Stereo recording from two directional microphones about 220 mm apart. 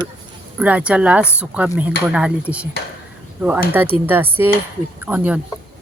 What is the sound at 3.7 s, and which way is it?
Speech, 10° right (ahead or behind).